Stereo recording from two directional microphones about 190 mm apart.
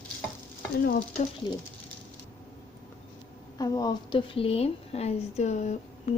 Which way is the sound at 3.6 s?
20° left (ahead or behind).